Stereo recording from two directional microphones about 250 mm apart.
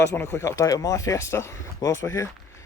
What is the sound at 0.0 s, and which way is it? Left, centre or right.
Speech, centre.